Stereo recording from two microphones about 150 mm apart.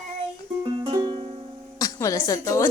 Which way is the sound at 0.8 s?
35° right (ahead or behind).